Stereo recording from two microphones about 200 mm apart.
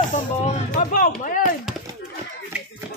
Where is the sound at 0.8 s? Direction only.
40° left (ahead or behind).